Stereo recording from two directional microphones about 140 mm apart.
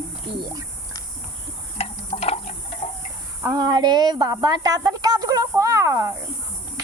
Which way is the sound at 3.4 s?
30° right (ahead or behind).